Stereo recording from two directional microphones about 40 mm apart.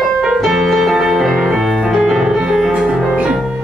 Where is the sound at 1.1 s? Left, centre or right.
Centre.